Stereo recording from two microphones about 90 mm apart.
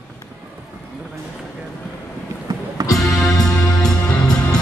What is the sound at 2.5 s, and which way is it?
Music, 45° right (ahead or behind).